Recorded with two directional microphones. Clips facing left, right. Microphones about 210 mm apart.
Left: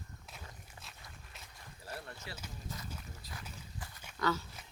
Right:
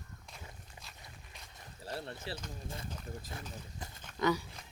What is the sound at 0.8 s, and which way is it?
Walk, centre (ahead or behind).